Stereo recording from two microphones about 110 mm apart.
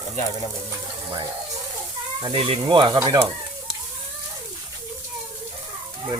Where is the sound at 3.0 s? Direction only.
30° right (ahead or behind).